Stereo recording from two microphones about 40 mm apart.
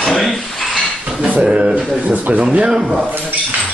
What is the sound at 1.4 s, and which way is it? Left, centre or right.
Speech, right.